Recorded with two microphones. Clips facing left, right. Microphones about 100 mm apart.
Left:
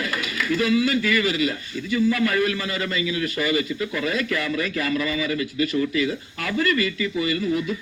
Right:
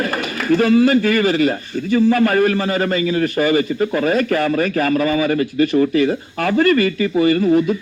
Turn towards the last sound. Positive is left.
turn(degrees=-45)  # may be behind; listen again after turning